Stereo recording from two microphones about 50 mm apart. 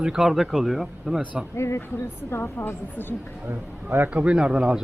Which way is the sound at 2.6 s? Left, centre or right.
Left.